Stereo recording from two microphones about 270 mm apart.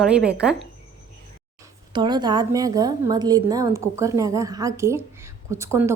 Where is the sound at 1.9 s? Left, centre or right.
Centre.